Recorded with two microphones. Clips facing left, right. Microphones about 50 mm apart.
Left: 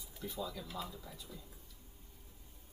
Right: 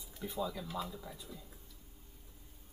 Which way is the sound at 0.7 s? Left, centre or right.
Centre.